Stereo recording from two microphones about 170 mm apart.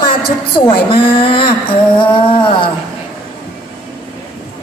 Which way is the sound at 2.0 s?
30° left (ahead or behind).